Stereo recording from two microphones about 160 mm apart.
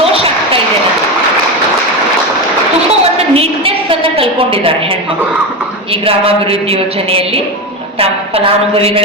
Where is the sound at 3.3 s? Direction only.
35° right (ahead or behind).